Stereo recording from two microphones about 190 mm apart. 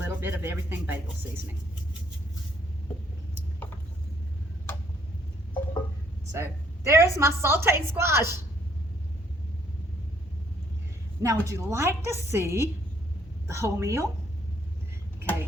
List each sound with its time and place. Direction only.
0.0 s speech: 10° right (ahead or behind)
6.3 s a woman's voice: 15° right (ahead or behind)
11.2 s a woman's voice: 15° right (ahead or behind)